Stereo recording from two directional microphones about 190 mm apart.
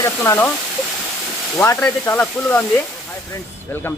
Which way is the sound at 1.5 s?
15° left (ahead or behind).